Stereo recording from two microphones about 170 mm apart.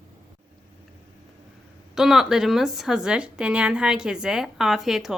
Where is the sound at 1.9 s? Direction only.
Centre (ahead or behind).